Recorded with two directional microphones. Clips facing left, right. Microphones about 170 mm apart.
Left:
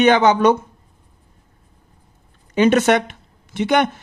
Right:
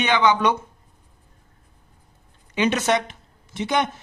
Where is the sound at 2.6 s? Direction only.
55° left (ahead or behind).